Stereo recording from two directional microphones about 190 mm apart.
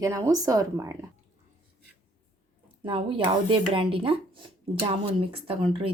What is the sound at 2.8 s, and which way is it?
Speech, 25° right (ahead or behind).